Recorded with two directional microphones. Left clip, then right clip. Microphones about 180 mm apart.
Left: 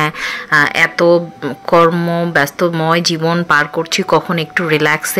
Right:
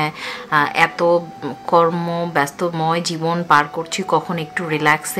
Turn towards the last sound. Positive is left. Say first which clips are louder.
# left 4 dB
turn(degrees=20)  # may be behind; listen again after turning